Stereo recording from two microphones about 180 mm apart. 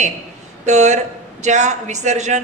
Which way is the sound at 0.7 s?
40° right (ahead or behind).